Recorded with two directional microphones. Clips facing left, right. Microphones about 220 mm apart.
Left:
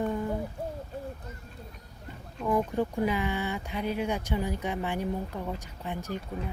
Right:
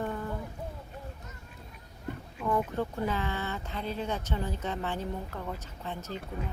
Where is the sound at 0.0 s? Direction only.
15° left (ahead or behind).